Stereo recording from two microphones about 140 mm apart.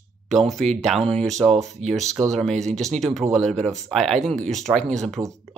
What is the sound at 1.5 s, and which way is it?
Speech, 50° right (ahead or behind).